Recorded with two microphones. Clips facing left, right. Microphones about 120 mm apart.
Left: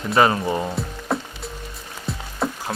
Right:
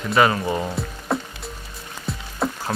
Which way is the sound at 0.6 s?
5° left (ahead or behind).